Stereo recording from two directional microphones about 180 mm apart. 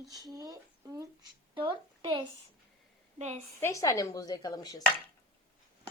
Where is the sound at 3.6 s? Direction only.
15° left (ahead or behind).